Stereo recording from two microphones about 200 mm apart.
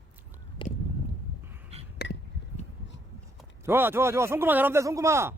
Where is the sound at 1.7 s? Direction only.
30° right (ahead or behind).